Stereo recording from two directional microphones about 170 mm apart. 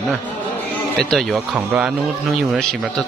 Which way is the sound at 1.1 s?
Centre (ahead or behind).